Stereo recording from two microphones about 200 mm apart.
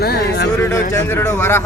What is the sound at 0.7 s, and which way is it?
Speech, 10° left (ahead or behind).